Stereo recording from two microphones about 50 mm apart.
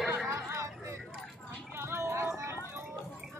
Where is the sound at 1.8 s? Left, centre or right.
Right.